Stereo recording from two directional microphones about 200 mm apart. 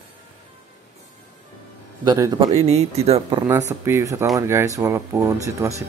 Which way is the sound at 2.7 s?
30° right (ahead or behind).